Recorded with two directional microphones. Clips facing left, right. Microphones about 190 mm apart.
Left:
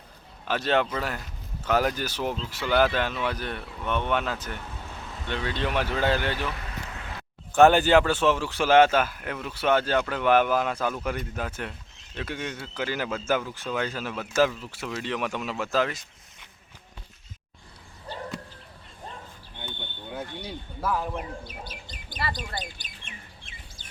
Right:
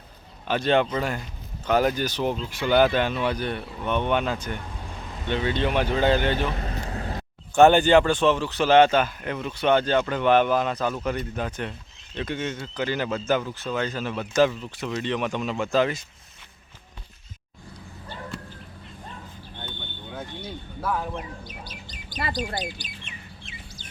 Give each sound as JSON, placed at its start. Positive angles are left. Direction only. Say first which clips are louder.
{"t": 0.4, "sound": "speech", "louder": "right 3 dB", "side_deg": 0}
{"t": 4.7, "sound": "vehicle", "louder": "right 2 dB", "side_deg": -10}
{"t": 5.2, "sound": "speech", "louder": "right 5 dB", "side_deg": 0}
{"t": 5.8, "sound": "speech", "louder": "right 4 dB", "side_deg": -20}
{"t": 6.1, "sound": "vehicle", "louder": "right 5 dB", "side_deg": -25}
{"t": 7.5, "sound": "speech", "louder": "right 2 dB", "side_deg": 0}
{"t": 20.8, "sound": "speech", "louder": "even", "side_deg": 0}
{"t": 21.2, "sound": "speech", "louder": "left 1 dB", "side_deg": 55}
{"t": 22.1, "sound": "bird", "louder": "right 2 dB", "side_deg": 55}
{"t": 22.8, "sound": "chirp", "louder": "right 4 dB", "side_deg": 50}